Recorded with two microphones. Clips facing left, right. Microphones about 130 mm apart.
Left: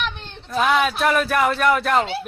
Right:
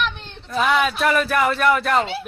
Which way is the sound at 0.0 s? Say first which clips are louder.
Right 3 dB; centre (ahead or behind).